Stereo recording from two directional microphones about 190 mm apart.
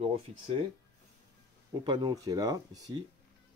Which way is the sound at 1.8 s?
25° right (ahead or behind).